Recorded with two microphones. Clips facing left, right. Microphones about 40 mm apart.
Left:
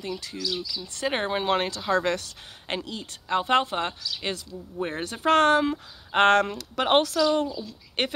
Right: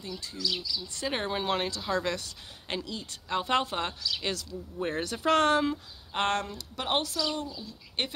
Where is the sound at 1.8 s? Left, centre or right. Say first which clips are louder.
Left 6 dB; left.